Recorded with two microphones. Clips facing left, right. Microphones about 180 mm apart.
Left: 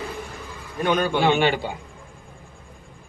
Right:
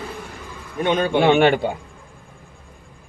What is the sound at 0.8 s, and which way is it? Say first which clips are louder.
Speech: right 2 dB; 25° right (ahead or behind).